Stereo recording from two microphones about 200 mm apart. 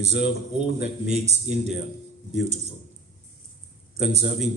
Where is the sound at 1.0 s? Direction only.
35° right (ahead or behind).